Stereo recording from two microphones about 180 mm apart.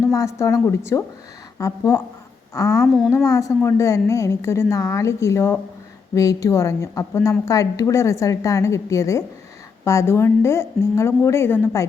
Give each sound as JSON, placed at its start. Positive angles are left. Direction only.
{"t": 0.1, "sound": "a woman's voice", "side_deg": 15}
{"t": 2.8, "sound": "speech", "side_deg": 0}
{"t": 3.2, "sound": "a woman's voice", "side_deg": 15}